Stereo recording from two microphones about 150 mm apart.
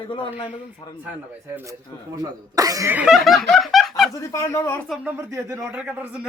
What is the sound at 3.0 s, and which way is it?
Snicker, centre (ahead or behind).